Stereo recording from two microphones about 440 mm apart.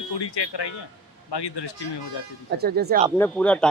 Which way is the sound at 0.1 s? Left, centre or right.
Left.